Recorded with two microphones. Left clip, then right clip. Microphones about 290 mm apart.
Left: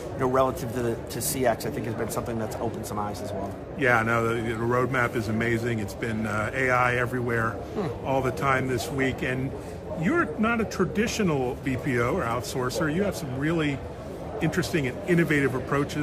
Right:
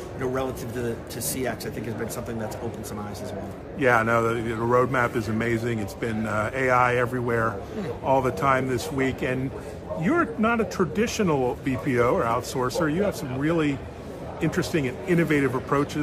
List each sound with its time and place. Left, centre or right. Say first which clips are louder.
0.2 s a man's voice: left 5 dB; centre
3.8 s a man's voice: right 2 dB; centre